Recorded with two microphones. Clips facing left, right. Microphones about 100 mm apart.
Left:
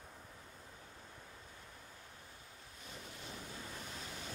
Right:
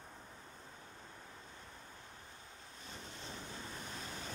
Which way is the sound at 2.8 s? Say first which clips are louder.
Right 1 dB; 30° right (ahead or behind).